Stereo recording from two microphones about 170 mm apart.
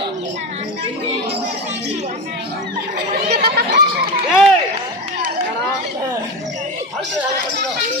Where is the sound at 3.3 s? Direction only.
70° right (ahead or behind).